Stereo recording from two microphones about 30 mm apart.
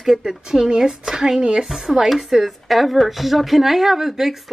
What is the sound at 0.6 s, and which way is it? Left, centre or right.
Speech, right.